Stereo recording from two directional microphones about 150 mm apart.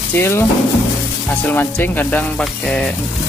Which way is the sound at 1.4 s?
10° left (ahead or behind).